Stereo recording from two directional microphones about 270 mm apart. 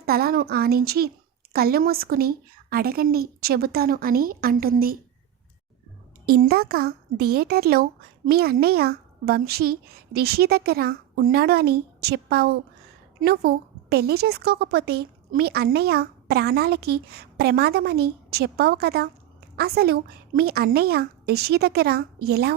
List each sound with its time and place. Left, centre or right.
0.0 s a woman's voice: right
6.2 s a woman's voice: right